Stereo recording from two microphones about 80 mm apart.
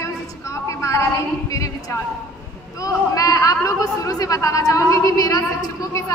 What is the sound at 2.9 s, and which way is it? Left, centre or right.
Speech, left.